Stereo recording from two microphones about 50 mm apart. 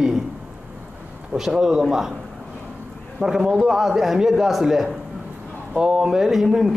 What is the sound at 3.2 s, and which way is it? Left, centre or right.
A man's voice, centre.